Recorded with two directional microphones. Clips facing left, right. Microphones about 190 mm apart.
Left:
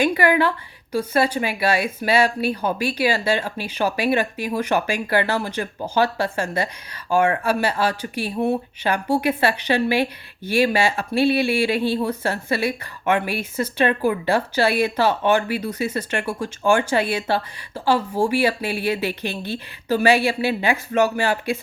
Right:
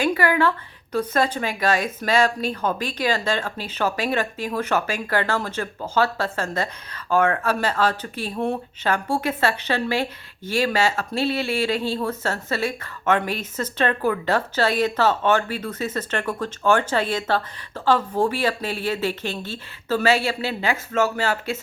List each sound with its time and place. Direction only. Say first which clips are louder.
0.0 s speech: left 2 dB; 15° left (ahead or behind)